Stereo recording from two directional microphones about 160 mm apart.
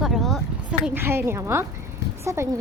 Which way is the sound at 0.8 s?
15° right (ahead or behind).